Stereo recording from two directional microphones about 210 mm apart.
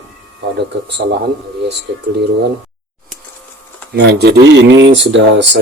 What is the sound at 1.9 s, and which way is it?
Speech, 55° right (ahead or behind).